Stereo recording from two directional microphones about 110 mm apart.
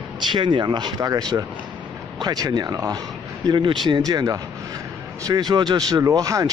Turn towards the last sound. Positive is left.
turn(degrees=-30)  # may be behind; listen again after turning